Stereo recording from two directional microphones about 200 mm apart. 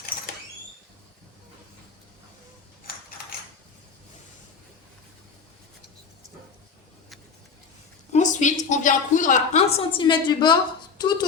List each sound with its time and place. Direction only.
2.9 s mechanisms: 50° left (ahead or behind)
8.1 s a woman's voice: 35° left (ahead or behind); by 11.3 s 20° left (ahead or behind)